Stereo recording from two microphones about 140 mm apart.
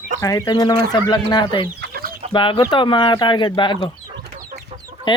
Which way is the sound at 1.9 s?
90° right.